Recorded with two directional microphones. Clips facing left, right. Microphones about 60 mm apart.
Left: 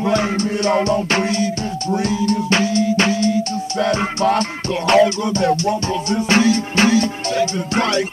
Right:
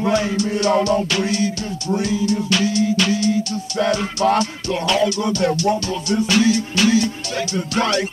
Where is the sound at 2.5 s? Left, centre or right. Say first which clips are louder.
Left 2 dB; left.